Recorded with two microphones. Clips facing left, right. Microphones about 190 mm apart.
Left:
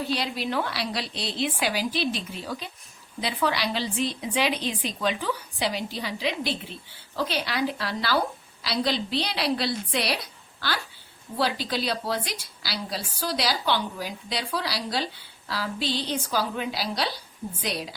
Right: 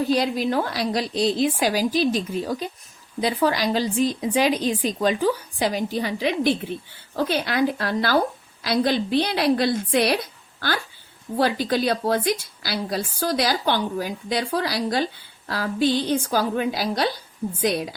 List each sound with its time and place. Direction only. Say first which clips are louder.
0.1 s a woman's voice: right 7 dB; 45° right (ahead or behind)
11.3 s a woman's voice: right 6 dB; 50° right (ahead or behind)